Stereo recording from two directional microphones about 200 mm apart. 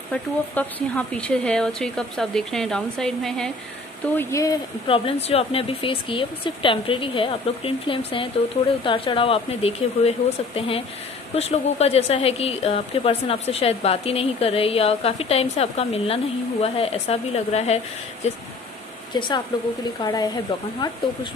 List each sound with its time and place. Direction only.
0.1 s speech: 5° left (ahead or behind)
4.1 s a woman's voice: 15° left (ahead or behind); by 18.4 s 35° left (ahead or behind)
19.1 s speech: 25° left (ahead or behind)